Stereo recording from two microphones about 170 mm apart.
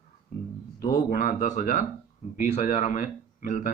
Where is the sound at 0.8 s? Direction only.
55° left (ahead or behind).